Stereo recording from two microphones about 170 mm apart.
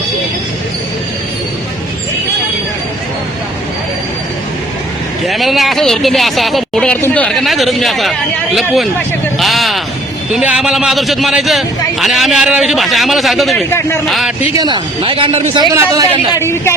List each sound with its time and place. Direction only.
5.2 s speech: centre (ahead or behind)
13.7 s speech: 15° left (ahead or behind)
14.1 s speech: centre (ahead or behind)
14.5 s speech: 25° right (ahead or behind)
15.5 s a man's voice: 20° right (ahead or behind)
16.3 s speech: 15° left (ahead or behind)